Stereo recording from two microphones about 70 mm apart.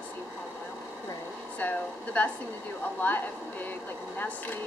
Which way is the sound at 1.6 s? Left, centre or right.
Left.